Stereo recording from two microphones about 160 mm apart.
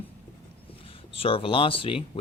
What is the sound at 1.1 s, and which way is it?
Speech, 35° left (ahead or behind).